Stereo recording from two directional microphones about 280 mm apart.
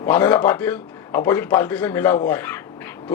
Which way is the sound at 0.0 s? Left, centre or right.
Centre.